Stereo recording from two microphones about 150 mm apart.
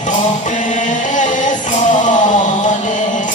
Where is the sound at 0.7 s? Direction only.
60° left (ahead or behind).